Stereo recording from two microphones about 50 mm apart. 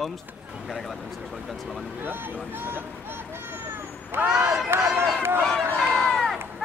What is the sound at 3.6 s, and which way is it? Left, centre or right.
Vehicle, right.